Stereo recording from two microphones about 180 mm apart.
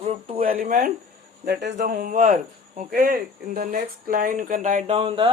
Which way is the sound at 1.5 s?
70° right (ahead or behind).